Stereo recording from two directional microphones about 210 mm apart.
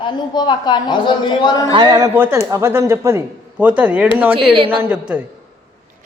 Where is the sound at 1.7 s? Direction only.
20° right (ahead or behind).